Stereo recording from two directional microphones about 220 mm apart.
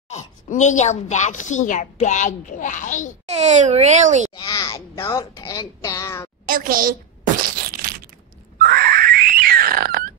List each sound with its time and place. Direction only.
0.1 s a woman's voice: 35° left (ahead or behind)
3.3 s a child's voice: 30° right (ahead or behind)
4.5 s speech: 15° left (ahead or behind)
6.4 s a child's voice: 40° right (ahead or behind)
7.6 s a sound: 40° right (ahead or behind)